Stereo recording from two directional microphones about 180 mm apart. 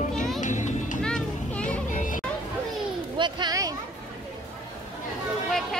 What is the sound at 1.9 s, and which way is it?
Music, 45° left (ahead or behind).